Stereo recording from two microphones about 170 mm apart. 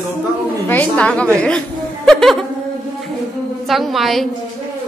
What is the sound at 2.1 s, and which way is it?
Music, centre (ahead or behind).